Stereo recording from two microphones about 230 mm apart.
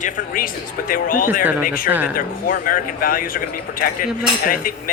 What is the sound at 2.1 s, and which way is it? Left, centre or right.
Speech, left.